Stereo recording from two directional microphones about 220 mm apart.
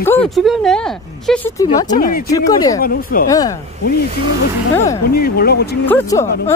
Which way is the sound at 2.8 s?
40° left (ahead or behind).